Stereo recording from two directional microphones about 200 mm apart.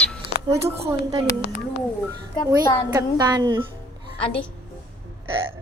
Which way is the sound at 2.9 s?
20° right (ahead or behind).